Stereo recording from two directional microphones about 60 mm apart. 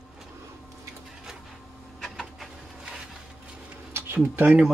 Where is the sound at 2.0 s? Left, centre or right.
Centre.